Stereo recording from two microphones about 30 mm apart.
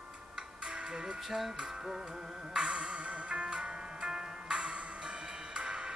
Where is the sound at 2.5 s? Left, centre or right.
Right.